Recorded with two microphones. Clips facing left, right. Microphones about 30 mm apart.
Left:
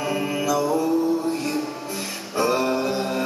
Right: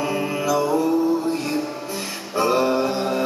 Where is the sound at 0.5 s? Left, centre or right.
Centre.